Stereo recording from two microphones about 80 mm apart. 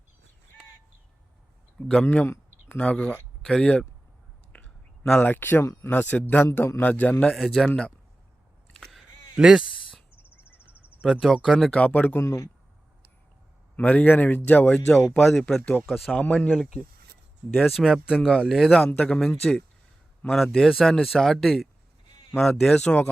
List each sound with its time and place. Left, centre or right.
1.9 s speech: centre
5.2 s a man's voice: left
7.3 s a man's voice: centre
9.3 s a sound: centre
10.2 s a sound: left
11.0 s a man's voice: centre
11.5 s speech: centre
12.2 s speech: left
13.7 s a man's voice: left
15.1 s a man's voice: centre
16.1 s speech: centre
16.5 s a man's voice: centre